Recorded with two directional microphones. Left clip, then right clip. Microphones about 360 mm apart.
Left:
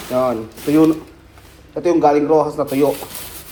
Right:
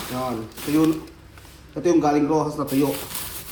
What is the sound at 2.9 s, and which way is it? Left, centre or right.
Rub, centre.